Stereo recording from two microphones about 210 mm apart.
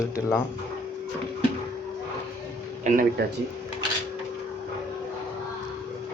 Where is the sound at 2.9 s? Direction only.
35° right (ahead or behind).